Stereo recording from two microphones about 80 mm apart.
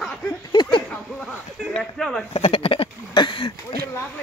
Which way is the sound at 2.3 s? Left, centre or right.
Left.